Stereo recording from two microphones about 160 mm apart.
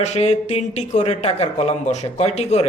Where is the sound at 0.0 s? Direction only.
45° left (ahead or behind).